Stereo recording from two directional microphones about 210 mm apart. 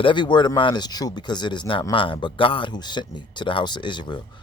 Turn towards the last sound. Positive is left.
turn(degrees=20)  # may be behind; listen again after turning